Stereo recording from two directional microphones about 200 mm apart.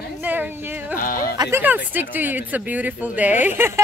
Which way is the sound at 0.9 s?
45° left (ahead or behind).